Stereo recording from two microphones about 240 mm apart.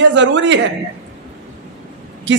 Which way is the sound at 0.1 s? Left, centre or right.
Right.